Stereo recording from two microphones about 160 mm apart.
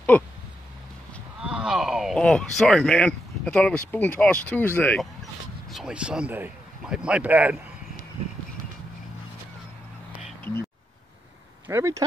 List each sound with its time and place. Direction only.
0.1 s speech: 10° left (ahead or behind)
1.4 s speech: 5° right (ahead or behind); by 5.0 s 10° left (ahead or behind)
5.7 s speech: 5° right (ahead or behind)
11.6 s speech: 15° right (ahead or behind)